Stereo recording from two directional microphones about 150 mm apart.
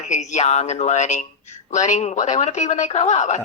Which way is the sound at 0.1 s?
50° left (ahead or behind).